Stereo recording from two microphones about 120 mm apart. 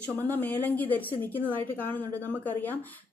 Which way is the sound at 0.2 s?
15° left (ahead or behind).